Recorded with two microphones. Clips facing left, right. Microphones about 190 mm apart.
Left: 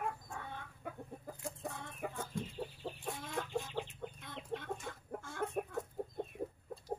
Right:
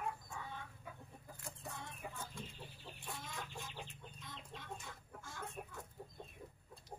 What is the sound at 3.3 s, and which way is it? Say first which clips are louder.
Chicken: left 10 dB; 70° left (ahead or behind).